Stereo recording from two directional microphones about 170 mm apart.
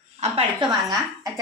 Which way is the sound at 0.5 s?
20° right (ahead or behind).